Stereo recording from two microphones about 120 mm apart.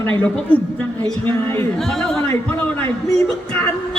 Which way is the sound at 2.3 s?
15° left (ahead or behind).